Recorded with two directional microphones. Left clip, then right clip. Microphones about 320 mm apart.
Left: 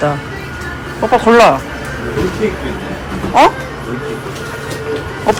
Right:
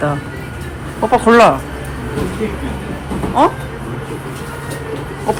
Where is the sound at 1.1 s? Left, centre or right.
Centre.